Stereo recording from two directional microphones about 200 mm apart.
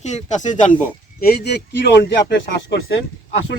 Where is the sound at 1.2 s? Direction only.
50° left (ahead or behind).